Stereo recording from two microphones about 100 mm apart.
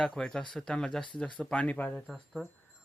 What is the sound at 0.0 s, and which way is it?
Speech, 5° left (ahead or behind).